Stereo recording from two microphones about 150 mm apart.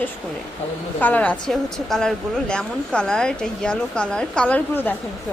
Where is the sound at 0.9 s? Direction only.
10° left (ahead or behind).